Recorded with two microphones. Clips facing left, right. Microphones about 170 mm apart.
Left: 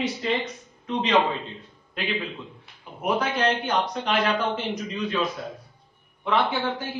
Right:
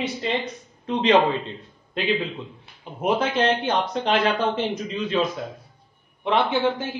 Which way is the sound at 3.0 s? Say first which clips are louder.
Right 3 dB; 25° right (ahead or behind).